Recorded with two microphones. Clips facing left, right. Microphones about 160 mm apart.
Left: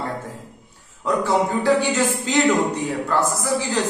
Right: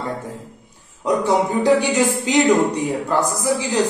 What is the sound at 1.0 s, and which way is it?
Speech, 15° right (ahead or behind).